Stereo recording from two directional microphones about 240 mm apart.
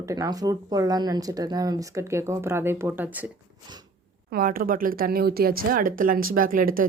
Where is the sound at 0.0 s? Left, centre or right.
Centre.